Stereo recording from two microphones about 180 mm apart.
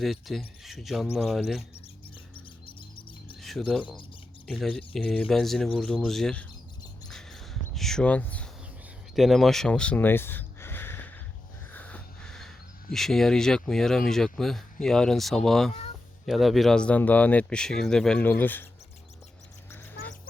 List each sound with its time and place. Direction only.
0.0 s speech: centre (ahead or behind)
2.3 s music: 30° left (ahead or behind)
3.4 s speech: centre (ahead or behind)
7.1 s a sound: 5° left (ahead or behind)
9.1 s speech: centre (ahead or behind)